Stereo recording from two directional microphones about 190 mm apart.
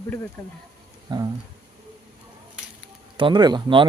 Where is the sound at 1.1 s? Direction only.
20° right (ahead or behind).